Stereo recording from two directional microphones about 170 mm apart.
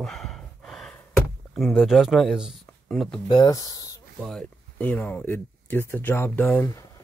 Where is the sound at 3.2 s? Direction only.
25° left (ahead or behind).